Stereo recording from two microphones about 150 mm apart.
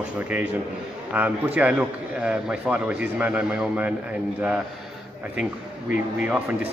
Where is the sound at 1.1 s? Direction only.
10° right (ahead or behind).